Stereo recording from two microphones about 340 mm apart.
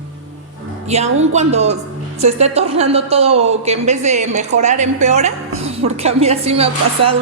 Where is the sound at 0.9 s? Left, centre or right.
Centre.